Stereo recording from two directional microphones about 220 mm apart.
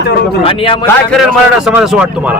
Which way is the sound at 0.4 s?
25° left (ahead or behind).